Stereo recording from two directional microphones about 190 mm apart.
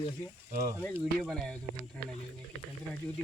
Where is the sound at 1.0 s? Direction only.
Centre (ahead or behind).